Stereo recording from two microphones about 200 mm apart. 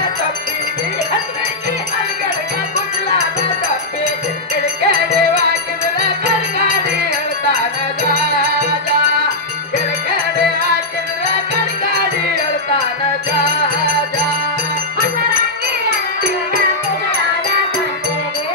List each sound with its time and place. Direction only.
4.8 s music: 55° right (ahead or behind)